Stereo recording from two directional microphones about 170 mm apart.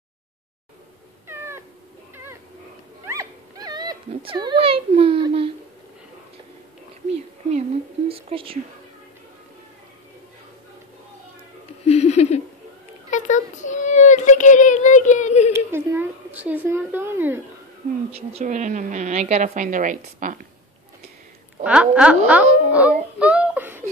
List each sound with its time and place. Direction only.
1.2 s cat: 15° right (ahead or behind)
3.1 s dog: 20° right (ahead or behind)
8.1 s speech: 35° right (ahead or behind)
11.8 s a sound: 40° left (ahead or behind)
13.1 s child singing: 45° left (ahead or behind)
15.5 s a sound: 15° right (ahead or behind)
18.1 s speech: 40° right (ahead or behind)
21.6 s a child's voice: 5° right (ahead or behind)